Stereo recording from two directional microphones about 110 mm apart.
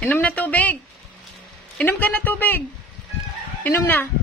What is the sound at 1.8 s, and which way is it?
Speech, 15° left (ahead or behind).